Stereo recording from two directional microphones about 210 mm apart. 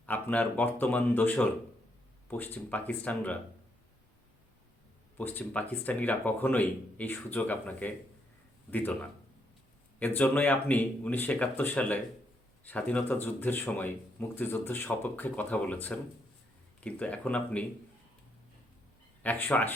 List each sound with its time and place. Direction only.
0.0 s speech: 5° left (ahead or behind)
5.1 s speech: 10° left (ahead or behind)
19.2 s speech: 10° left (ahead or behind)